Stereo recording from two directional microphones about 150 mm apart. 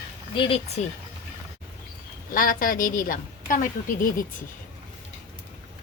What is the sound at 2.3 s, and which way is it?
A woman's voice, 70° left (ahead or behind).